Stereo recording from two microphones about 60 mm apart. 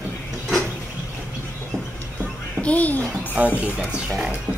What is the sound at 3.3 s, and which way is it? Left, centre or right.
Speech, right.